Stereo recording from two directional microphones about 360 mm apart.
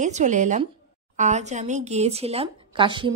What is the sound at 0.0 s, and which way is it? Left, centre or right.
A woman's voice, centre.